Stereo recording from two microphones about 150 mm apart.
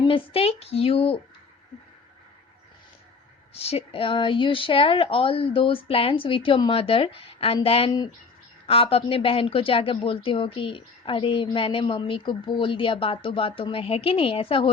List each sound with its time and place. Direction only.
0.0 s a woman's voice: 40° left (ahead or behind)
3.5 s a woman's voice: 40° left (ahead or behind)
7.9 s speech: 25° left (ahead or behind)
8.6 s a woman's voice: 40° left (ahead or behind)